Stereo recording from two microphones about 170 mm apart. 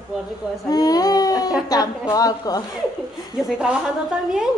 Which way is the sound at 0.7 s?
20° left (ahead or behind).